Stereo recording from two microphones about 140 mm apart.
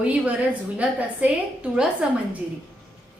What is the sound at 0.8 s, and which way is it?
A woman's voice, 10° right (ahead or behind).